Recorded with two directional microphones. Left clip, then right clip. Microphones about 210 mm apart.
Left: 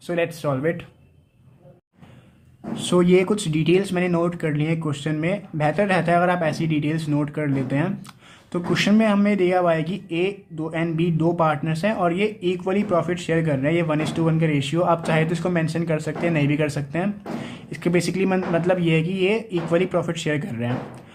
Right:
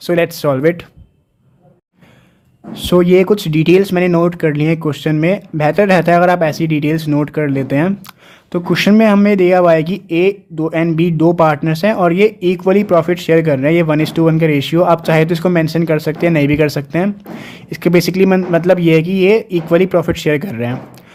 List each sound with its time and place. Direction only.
0.0 s speech: 50° right (ahead or behind)
2.7 s speech: 40° right (ahead or behind)